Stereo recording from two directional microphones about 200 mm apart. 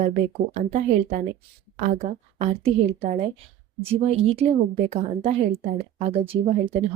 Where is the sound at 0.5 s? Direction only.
35° right (ahead or behind).